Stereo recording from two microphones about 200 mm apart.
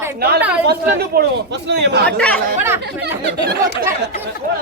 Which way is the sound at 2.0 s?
5° left (ahead or behind).